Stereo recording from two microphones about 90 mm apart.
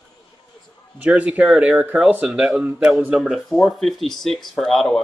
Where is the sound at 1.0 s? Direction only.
15° right (ahead or behind); by 5.0 s centre (ahead or behind).